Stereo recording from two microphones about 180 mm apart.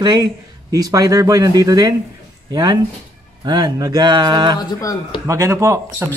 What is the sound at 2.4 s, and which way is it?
Speech, 25° right (ahead or behind).